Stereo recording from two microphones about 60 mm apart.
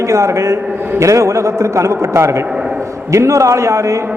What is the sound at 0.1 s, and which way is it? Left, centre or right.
A man's voice, right.